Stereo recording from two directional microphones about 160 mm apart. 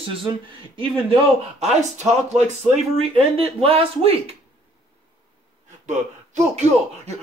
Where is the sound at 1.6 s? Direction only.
45° right (ahead or behind).